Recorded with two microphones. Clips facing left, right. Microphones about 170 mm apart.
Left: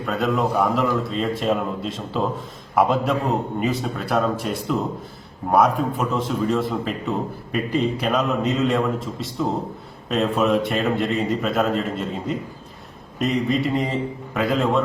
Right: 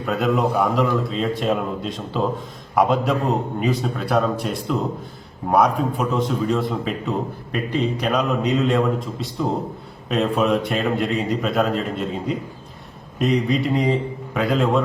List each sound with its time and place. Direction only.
0.0 s a man's voice: centre (ahead or behind)